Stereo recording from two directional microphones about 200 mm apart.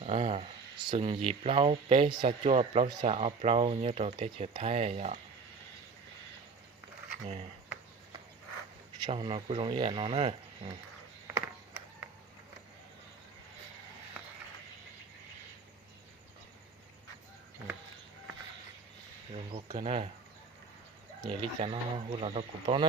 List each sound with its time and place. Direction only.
0.0 s speech: 30° right (ahead or behind)
9.0 s speech: 25° right (ahead or behind)
19.5 s speech: 25° right (ahead or behind)
21.2 s speech: 25° right (ahead or behind)